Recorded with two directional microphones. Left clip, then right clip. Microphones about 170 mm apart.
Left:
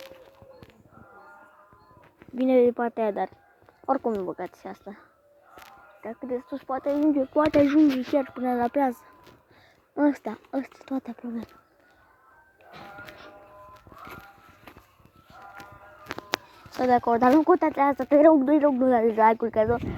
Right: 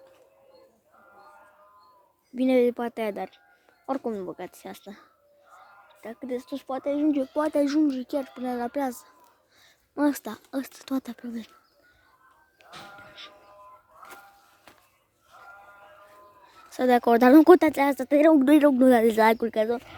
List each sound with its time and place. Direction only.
2.3 s speech: 20° right (ahead or behind)
7.0 s speech: 20° right (ahead or behind)
7.4 s speech: 5° right (ahead or behind)
9.9 s speech: 15° right (ahead or behind)
13.0 s music: 5° right (ahead or behind)
16.6 s speech: 40° right (ahead or behind)
17.0 s speech: 60° right (ahead or behind)
18.8 s speech: 60° right (ahead or behind)
19.1 s speech: 70° right (ahead or behind)
19.4 s speech: 50° right (ahead or behind)